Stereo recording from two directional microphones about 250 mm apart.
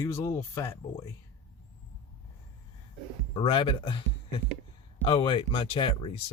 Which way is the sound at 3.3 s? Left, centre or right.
Left.